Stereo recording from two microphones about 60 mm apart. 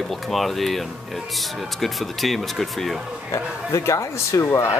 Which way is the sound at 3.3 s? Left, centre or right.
Left.